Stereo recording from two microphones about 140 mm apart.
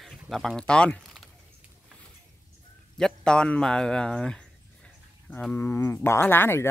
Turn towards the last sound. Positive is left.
turn(degrees=15)  # may be behind; listen again after turning